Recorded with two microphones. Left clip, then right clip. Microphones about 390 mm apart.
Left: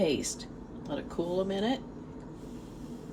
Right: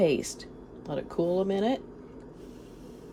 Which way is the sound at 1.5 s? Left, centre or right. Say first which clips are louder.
Right 4 dB; centre.